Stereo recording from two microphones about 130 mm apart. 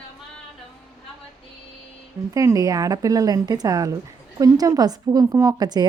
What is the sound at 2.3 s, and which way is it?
A woman's voice, 25° right (ahead or behind).